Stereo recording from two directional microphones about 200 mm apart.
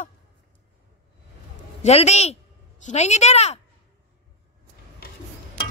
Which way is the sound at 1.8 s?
35° left (ahead or behind).